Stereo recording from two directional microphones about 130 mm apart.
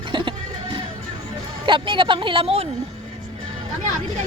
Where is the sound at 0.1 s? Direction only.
40° right (ahead or behind).